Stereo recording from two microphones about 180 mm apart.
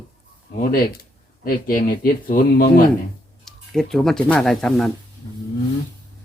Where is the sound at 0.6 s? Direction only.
55° left (ahead or behind).